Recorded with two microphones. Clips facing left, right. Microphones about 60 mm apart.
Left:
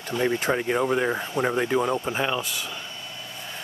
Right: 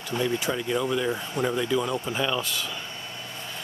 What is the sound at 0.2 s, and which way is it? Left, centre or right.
Speech, left.